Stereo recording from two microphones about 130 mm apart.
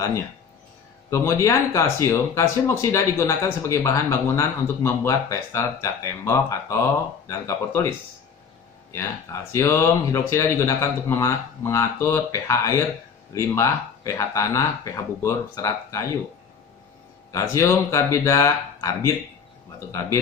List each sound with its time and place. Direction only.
1.1 s speech: 20° left (ahead or behind)
8.9 s speech: 20° left (ahead or behind)
17.3 s speech: 25° left (ahead or behind)